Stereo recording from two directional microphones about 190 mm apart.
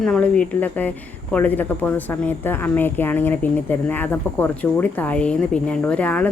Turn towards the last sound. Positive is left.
turn(degrees=5)  # may be behind; listen again after turning